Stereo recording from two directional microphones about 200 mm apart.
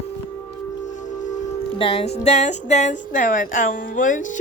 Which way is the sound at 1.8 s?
25° left (ahead or behind).